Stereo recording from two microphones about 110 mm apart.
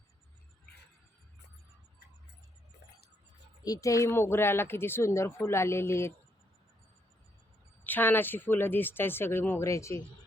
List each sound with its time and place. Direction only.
3.6 s speech: 30° left (ahead or behind)
7.9 s speech: 15° left (ahead or behind)